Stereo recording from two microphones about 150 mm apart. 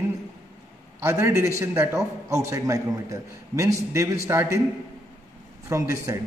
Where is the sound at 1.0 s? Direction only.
20° right (ahead or behind).